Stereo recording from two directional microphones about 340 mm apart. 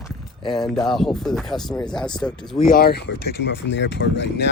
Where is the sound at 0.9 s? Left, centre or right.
Centre.